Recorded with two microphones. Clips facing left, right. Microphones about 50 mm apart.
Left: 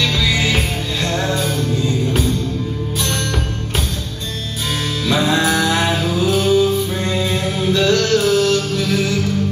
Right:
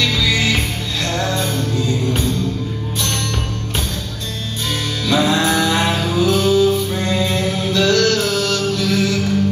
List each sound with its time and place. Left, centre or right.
0.2 s music: centre
5.0 s music: centre
5.4 s music: centre
6.2 s music: centre